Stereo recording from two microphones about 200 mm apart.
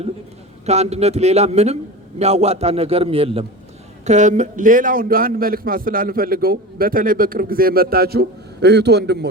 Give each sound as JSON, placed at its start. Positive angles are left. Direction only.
{"t": 0.6, "sound": "a man's voice", "side_deg": -35}